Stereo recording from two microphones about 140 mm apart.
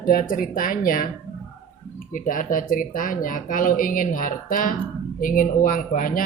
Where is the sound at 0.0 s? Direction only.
85° left.